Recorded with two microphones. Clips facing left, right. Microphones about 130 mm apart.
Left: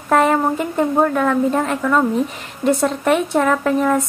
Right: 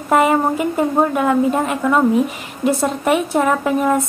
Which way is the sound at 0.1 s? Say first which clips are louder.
Right 1 dB; 10° right (ahead or behind).